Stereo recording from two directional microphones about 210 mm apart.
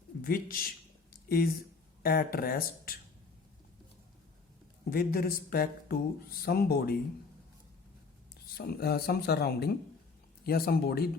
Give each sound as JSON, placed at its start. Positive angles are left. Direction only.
{"t": 0.2, "sound": "speech", "side_deg": 45}
{"t": 1.1, "sound": "a sound", "side_deg": 45}
{"t": 2.0, "sound": "speech", "side_deg": 45}
{"t": 4.9, "sound": "speech", "side_deg": 45}
{"t": 8.5, "sound": "speech", "side_deg": 45}